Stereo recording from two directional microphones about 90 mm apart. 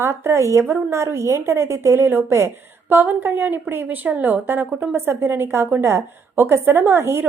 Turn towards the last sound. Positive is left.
turn(degrees=-30)  # may be behind; listen again after turning